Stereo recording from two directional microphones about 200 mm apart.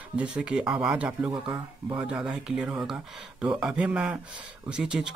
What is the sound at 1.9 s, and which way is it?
Speech, 5° right (ahead or behind).